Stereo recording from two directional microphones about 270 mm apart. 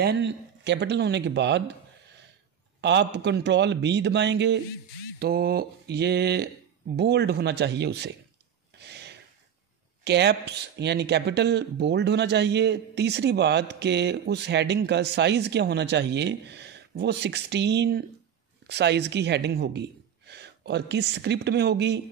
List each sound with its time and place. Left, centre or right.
0.0 s speech: right
2.8 s speech: right
8.7 s a sound: right
10.0 s speech: right